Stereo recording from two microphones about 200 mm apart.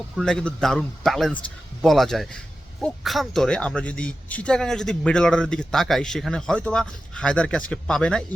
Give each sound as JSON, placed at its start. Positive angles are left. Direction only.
{"t": 0.2, "sound": "speech", "side_deg": 5}